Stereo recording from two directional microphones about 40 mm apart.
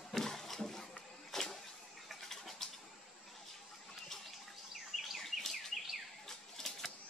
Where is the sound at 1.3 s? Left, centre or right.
Centre.